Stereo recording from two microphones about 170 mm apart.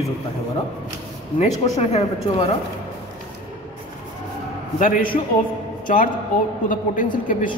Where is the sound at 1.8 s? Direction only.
40° left (ahead or behind).